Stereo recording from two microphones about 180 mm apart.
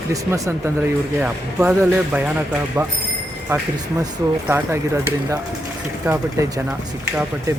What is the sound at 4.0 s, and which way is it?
Speech, 15° right (ahead or behind).